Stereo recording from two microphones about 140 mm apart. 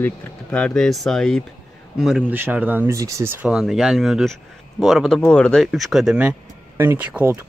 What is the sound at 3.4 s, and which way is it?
A man's voice, 5° right (ahead or behind).